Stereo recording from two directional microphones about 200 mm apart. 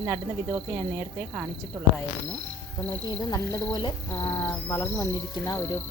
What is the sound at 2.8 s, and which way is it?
Speech, 20° left (ahead or behind).